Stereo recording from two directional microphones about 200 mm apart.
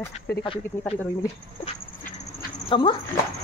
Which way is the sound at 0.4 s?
25° left (ahead or behind).